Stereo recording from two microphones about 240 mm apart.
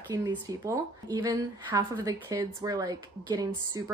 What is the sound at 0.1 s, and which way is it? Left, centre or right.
Speech, centre.